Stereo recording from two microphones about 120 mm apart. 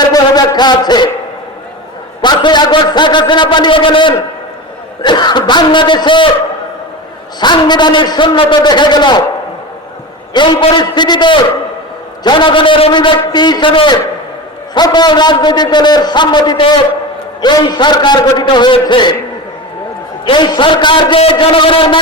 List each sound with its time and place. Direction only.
0.0 s a sound: 35° left (ahead or behind)
2.2 s a man's voice: 40° left (ahead or behind)
7.3 s a man's voice: 35° left (ahead or behind)
10.3 s a man's voice: 40° left (ahead or behind)
20.2 s a man's voice: 40° left (ahead or behind)